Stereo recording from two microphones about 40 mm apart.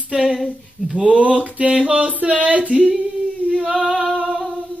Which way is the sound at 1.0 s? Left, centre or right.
Right.